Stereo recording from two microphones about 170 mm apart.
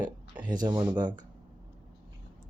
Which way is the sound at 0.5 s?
25° right (ahead or behind).